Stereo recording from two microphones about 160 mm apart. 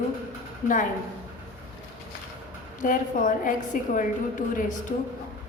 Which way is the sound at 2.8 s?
55° left (ahead or behind).